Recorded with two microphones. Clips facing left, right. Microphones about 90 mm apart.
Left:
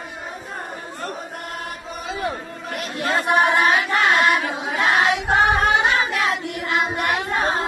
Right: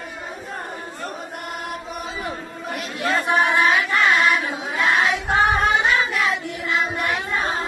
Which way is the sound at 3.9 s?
50° left (ahead or behind).